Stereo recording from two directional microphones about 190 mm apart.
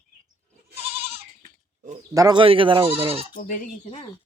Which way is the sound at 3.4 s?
45° left (ahead or behind).